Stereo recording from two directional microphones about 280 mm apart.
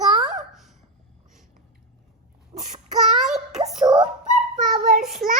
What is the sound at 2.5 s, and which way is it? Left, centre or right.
Child singing, centre.